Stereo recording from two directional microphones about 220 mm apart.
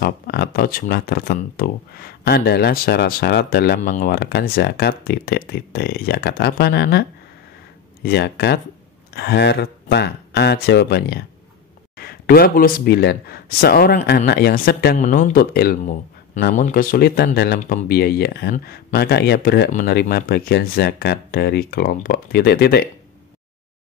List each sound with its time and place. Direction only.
0.0 s speech: 45° left (ahead or behind)